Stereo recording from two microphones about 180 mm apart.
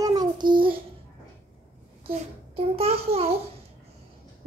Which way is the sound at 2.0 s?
35° right (ahead or behind).